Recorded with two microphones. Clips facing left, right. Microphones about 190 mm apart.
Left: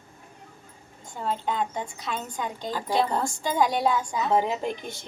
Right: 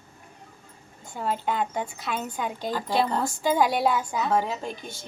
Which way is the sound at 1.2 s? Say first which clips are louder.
Right 1 dB; 5° right (ahead or behind).